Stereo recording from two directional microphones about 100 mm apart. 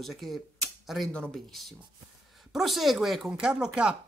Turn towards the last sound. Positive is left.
turn(degrees=-10)  # may be behind; listen again after turning